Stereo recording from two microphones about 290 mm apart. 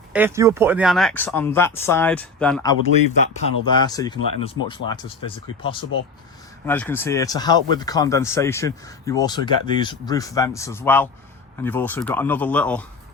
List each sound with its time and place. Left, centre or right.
0.1 s speech: centre
6.7 s speech: centre